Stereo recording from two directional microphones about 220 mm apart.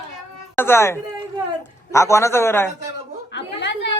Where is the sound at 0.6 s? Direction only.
10° left (ahead or behind).